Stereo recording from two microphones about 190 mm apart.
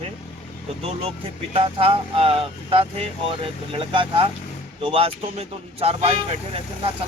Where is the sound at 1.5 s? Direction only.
30° right (ahead or behind).